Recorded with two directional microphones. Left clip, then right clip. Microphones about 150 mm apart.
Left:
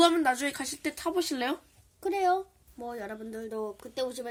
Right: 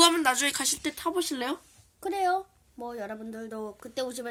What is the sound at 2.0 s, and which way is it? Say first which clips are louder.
A woman's voice: even; 30° right (ahead or behind).